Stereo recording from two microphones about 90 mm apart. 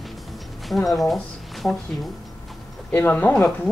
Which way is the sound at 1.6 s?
10° left (ahead or behind).